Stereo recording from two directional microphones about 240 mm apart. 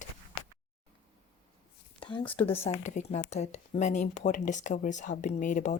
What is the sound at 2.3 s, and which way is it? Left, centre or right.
Speech, left.